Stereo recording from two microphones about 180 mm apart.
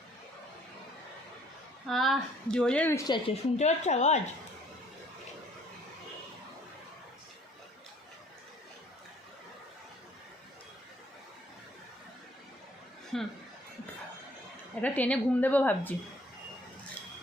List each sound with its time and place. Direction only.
1.9 s speech: centre (ahead or behind)
3.1 s speech: 35° left (ahead or behind)
13.1 s chuckle: centre (ahead or behind)
14.8 s a woman's voice: 10° left (ahead or behind)